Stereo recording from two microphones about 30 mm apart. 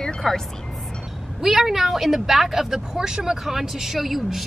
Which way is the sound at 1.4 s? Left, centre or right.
Centre.